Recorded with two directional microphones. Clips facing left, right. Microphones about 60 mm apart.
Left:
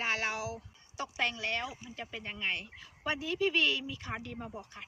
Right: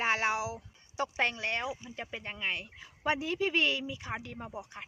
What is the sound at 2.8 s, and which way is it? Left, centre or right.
A woman's voice, right.